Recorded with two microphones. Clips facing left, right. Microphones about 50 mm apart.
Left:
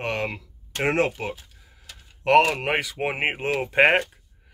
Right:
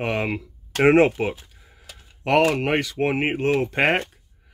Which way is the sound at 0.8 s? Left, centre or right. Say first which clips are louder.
Right 7 dB; right.